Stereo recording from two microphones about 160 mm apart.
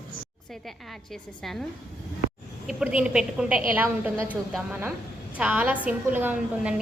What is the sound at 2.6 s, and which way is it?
A woman's voice, 5° right (ahead or behind).